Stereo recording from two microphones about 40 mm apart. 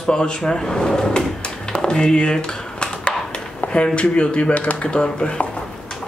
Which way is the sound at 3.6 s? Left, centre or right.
Left.